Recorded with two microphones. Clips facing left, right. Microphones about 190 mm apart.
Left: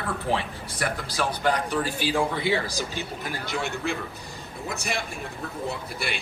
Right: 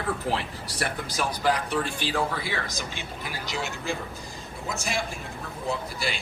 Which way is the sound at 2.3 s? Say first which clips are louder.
Left 6 dB; 25° left (ahead or behind).